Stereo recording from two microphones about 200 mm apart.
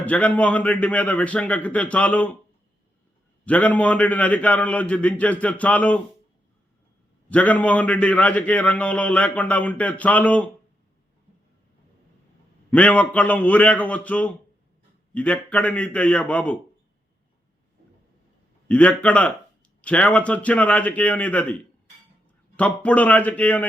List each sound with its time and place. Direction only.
0.0 s a man's voice: 5° left (ahead or behind)
3.4 s a man's voice: 5° left (ahead or behind)
7.3 s a man's voice: 5° left (ahead or behind)
12.7 s a man's voice: 5° left (ahead or behind)
18.7 s a man's voice: 5° left (ahead or behind)